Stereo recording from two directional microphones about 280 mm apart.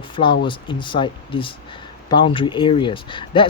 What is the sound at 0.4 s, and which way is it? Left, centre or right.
Speech, centre.